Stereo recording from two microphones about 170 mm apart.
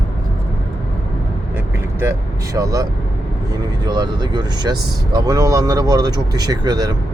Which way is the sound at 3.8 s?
25° right (ahead or behind).